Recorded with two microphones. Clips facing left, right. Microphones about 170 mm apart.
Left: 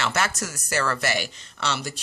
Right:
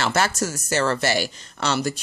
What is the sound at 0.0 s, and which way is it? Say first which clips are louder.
Speech: right 4 dB; 35° right (ahead or behind).